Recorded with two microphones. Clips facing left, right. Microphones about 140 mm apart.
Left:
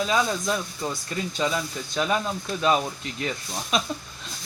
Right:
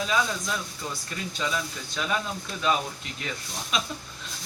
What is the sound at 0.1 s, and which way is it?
Speech, 35° left (ahead or behind).